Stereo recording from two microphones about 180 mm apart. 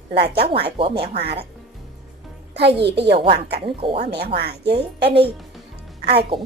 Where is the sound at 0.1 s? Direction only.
65° right (ahead or behind).